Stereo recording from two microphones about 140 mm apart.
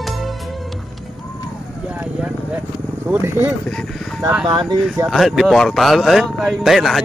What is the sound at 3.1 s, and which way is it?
Speech, 15° right (ahead or behind).